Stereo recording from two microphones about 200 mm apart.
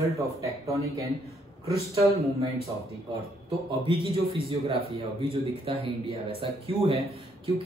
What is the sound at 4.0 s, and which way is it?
Speech, 25° right (ahead or behind).